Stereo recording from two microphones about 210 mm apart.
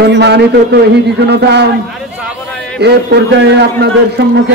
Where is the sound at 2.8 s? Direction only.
55° right (ahead or behind).